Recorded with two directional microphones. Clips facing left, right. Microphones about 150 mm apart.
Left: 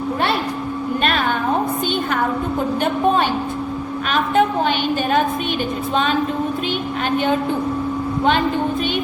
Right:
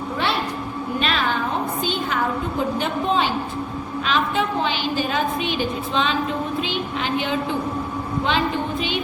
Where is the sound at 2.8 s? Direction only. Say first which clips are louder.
Left 6 dB; 50° left (ahead or behind).